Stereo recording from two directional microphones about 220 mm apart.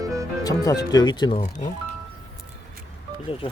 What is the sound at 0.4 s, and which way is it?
Speech, 15° left (ahead or behind).